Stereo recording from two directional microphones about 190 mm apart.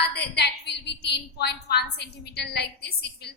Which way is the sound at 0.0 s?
60° left (ahead or behind).